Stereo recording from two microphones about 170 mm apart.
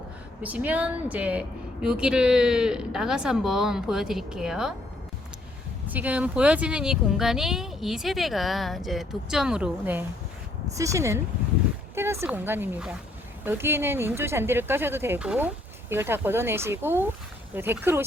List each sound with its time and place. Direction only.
0.4 s a woman's voice: 10° right (ahead or behind)
5.9 s a woman's voice: 10° right (ahead or behind)